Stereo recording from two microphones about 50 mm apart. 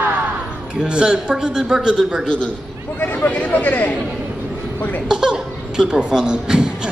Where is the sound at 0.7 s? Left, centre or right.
Centre.